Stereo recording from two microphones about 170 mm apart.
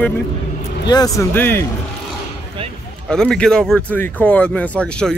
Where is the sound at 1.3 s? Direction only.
10° left (ahead or behind).